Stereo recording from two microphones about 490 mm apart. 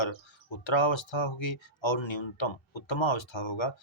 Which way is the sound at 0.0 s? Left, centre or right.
Left.